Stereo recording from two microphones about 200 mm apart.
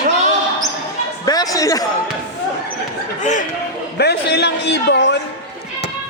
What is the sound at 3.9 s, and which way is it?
A man's voice, 55° left (ahead or behind).